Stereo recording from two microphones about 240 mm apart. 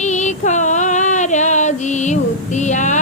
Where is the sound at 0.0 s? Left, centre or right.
Left.